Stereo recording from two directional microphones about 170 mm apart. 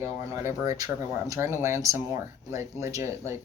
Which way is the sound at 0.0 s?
15° right (ahead or behind).